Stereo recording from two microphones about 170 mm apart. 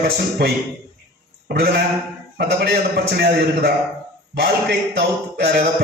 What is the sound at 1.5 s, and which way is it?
A man's voice, 70° right (ahead or behind).